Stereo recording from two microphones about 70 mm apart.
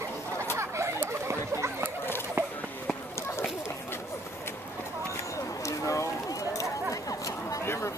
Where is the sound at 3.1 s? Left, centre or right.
Left.